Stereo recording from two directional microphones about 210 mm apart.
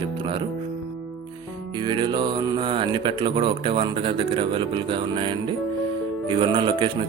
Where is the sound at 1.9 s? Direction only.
20° right (ahead or behind).